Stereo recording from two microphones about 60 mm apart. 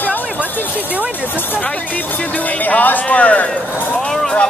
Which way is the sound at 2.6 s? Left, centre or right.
Left.